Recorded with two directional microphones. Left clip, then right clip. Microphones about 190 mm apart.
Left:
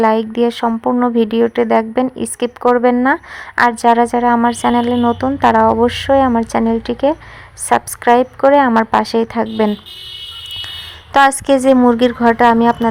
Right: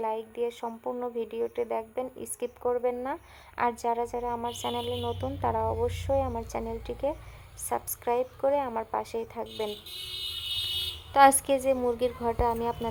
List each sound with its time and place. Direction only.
0.0 s speech: 30° left (ahead or behind)
11.1 s speech: 30° left (ahead or behind)